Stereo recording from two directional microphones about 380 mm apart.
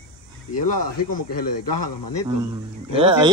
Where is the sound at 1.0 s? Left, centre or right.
Left.